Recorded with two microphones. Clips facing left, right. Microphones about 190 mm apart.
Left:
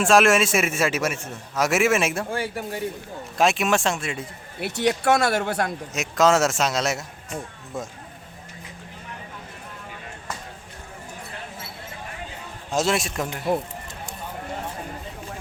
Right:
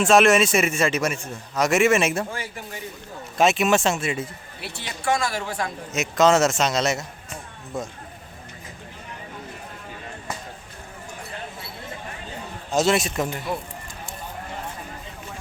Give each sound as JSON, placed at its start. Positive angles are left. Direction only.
{"t": 0.0, "sound": "a man's voice", "side_deg": 0}
{"t": 2.4, "sound": "speech", "side_deg": 55}
{"t": 3.3, "sound": "a man's voice", "side_deg": 0}
{"t": 4.8, "sound": "speech", "side_deg": 70}
{"t": 5.9, "sound": "a man's voice", "side_deg": 0}
{"t": 12.7, "sound": "a man's voice", "side_deg": 0}